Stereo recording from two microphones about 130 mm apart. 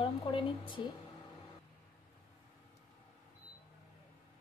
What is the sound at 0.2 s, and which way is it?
Speech, 40° left (ahead or behind).